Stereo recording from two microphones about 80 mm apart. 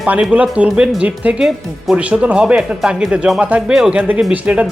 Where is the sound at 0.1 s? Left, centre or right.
Centre.